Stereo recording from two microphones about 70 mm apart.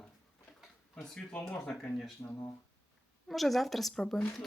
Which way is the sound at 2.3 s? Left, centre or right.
Left.